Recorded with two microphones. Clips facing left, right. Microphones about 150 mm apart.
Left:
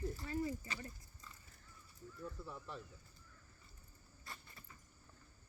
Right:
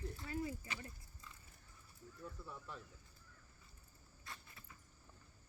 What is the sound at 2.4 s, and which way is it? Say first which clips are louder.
Speech: left 3 dB; centre (ahead or behind).